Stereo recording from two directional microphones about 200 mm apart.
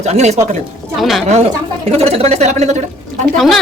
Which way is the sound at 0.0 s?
35° right (ahead or behind).